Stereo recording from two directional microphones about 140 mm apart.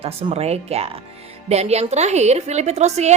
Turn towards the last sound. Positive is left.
turn(degrees=-50)  # may be behind; listen again after turning